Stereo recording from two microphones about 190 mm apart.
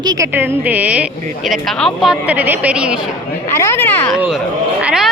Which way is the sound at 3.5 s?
15° left (ahead or behind).